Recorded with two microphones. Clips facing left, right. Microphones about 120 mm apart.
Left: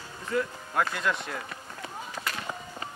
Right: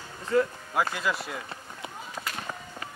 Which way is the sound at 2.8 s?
25° left (ahead or behind).